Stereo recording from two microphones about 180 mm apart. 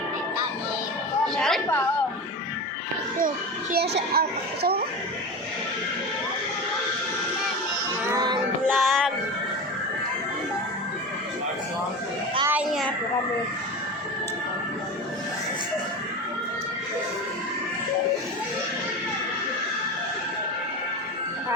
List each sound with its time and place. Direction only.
1.4 s chatter: centre (ahead or behind)
3.2 s a child's voice: 50° right (ahead or behind)
8.0 s music: 20° right (ahead or behind)
8.7 s music: centre (ahead or behind)
12.5 s a child's voice: 10° right (ahead or behind)